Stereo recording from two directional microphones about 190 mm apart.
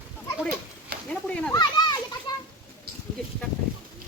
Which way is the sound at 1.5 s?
20° left (ahead or behind).